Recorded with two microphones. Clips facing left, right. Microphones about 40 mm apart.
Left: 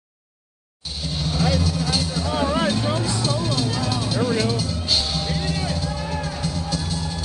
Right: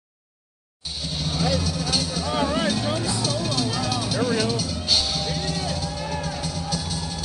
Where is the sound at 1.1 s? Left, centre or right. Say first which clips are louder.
Left 2 dB; centre.